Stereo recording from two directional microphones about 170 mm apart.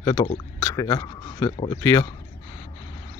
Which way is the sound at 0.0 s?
20° left (ahead or behind).